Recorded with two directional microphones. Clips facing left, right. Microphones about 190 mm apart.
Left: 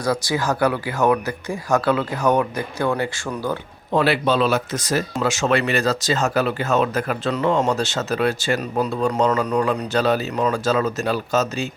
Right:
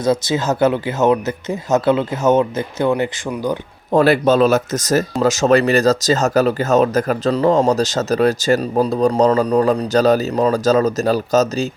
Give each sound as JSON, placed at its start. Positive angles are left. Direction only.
{"t": 0.0, "sound": "speech", "side_deg": -20}
{"t": 3.9, "sound": "speech", "side_deg": -45}